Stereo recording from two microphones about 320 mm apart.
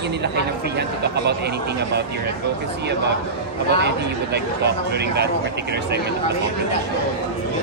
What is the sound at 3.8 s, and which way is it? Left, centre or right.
Speech, right.